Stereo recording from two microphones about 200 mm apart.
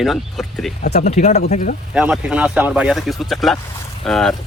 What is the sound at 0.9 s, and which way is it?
Speech, 35° left (ahead or behind).